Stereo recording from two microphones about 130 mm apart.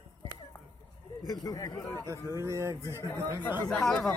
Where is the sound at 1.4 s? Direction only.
30° left (ahead or behind).